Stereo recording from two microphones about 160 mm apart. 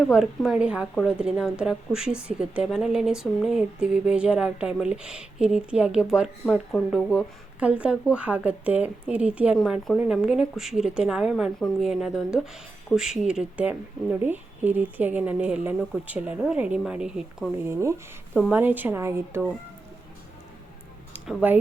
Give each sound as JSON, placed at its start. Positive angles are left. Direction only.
{"t": 0.1, "sound": "a woman's voice", "side_deg": -5}
{"t": 17.7, "sound": "a woman's voice", "side_deg": -15}
{"t": 21.1, "sound": "a sound", "side_deg": -10}